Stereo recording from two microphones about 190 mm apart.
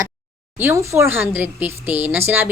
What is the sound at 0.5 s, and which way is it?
A woman's voice, 10° right (ahead or behind).